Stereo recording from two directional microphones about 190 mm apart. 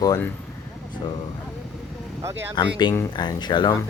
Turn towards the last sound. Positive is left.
turn(degrees=20)  # may be behind; listen again after turning